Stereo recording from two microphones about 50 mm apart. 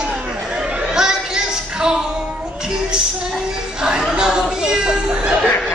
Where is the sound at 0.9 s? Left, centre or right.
Centre.